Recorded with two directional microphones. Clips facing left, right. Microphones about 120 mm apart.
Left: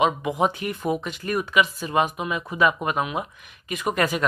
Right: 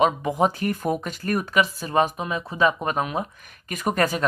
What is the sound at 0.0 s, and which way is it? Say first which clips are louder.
Speech: right 1 dB; 35° right (ahead or behind).